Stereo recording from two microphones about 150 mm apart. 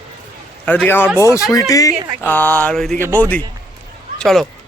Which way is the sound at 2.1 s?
10° left (ahead or behind).